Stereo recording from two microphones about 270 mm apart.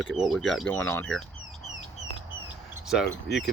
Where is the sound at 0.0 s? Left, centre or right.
Centre.